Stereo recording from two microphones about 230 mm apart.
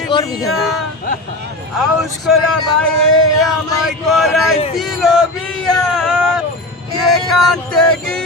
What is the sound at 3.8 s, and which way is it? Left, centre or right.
Speech, centre.